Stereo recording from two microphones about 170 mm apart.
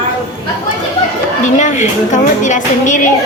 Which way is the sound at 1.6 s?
45° left (ahead or behind).